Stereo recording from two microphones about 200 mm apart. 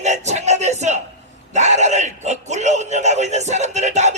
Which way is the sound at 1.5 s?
35° right (ahead or behind).